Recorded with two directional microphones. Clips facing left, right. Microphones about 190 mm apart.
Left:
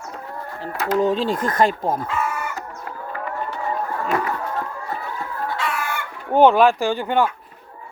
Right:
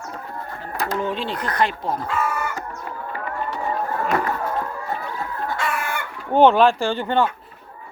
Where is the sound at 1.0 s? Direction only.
40° left (ahead or behind).